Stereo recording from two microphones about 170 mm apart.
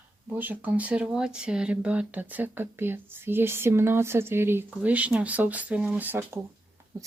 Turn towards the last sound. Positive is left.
turn(degrees=-20)  # may be behind; listen again after turning